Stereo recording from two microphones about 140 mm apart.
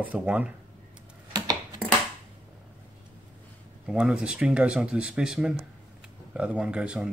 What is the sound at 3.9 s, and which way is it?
Speech, 5° right (ahead or behind).